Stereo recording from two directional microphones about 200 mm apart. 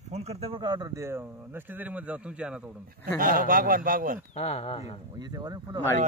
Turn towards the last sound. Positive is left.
turn(degrees=-20)  # may be behind; listen again after turning